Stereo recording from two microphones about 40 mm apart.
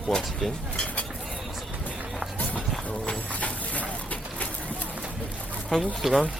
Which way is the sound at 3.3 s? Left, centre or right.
Left.